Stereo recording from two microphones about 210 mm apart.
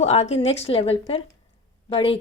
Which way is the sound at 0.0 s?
30° left (ahead or behind).